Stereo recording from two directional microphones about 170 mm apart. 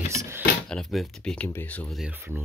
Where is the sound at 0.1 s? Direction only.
20° right (ahead or behind).